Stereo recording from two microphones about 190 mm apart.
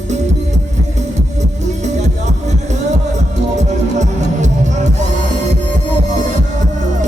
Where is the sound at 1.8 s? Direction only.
35° right (ahead or behind).